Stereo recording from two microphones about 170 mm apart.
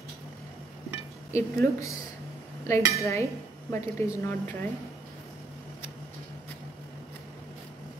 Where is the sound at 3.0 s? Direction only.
15° left (ahead or behind).